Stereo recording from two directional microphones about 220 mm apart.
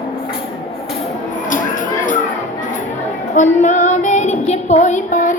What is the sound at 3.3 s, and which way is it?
Child singing, 35° left (ahead or behind).